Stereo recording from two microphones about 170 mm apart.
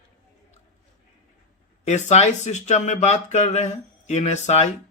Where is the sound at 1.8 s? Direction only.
40° left (ahead or behind).